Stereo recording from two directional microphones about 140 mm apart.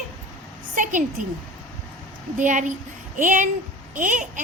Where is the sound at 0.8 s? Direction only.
65° right (ahead or behind).